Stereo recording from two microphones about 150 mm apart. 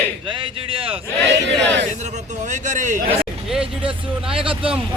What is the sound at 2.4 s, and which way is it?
Speech, 55° right (ahead or behind).